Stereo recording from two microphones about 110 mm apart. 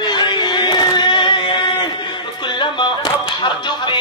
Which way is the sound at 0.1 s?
45° left (ahead or behind).